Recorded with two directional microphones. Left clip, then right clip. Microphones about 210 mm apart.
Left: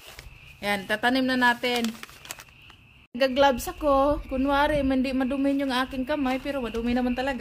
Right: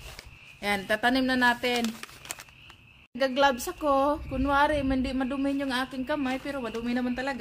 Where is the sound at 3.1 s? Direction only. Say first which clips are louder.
Left 3 dB; 15° left (ahead or behind).